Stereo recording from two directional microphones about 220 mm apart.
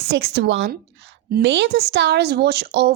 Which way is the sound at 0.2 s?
50° right (ahead or behind).